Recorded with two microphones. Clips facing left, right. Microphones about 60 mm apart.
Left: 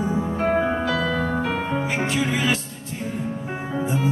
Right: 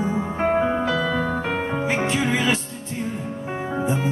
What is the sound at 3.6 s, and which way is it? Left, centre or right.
Music, right.